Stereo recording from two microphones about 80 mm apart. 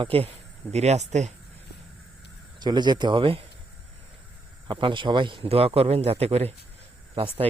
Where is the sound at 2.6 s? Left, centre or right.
Right.